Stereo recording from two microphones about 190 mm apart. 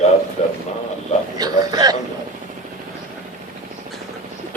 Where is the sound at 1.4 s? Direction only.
20° right (ahead or behind).